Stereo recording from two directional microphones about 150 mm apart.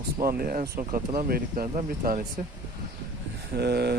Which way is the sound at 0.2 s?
80° right.